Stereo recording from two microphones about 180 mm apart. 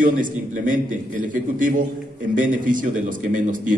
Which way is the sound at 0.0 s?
50° right (ahead or behind).